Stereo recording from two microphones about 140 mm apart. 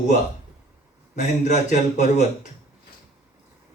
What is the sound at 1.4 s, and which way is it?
Speech, 60° left (ahead or behind).